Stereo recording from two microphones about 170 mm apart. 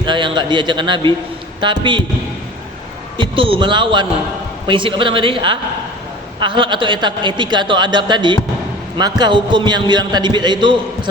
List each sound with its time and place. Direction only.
0.0 s a man's voice: 25° right (ahead or behind)
3.2 s a man's voice: 30° right (ahead or behind)